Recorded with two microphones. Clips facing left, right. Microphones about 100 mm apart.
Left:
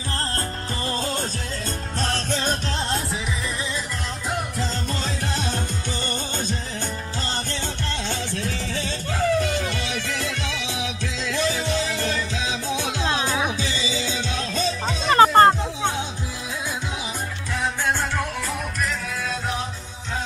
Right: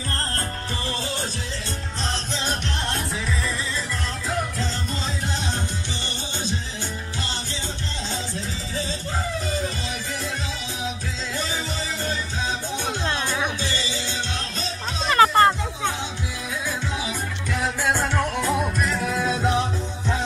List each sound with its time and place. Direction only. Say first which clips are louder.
0.8 s music: left 4 dB; 40° left (ahead or behind)
2.0 s music: left 4 dB; 55° left (ahead or behind)
8.1 s music: left 2 dB; 70° left (ahead or behind)
11.3 s music: left 6 dB; 90° left
15.0 s music: left 3 dB; 35° left (ahead or behind)
17.8 s music: right 3 dB; 10° right (ahead or behind)
18.4 s music: right 4 dB; 25° right (ahead or behind)